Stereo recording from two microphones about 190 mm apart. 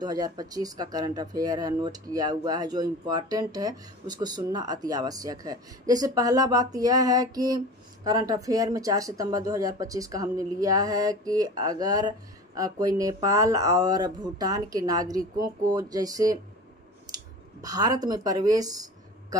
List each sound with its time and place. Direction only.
0.0 s speech: 20° right (ahead or behind)
17.6 s speech: 20° right (ahead or behind)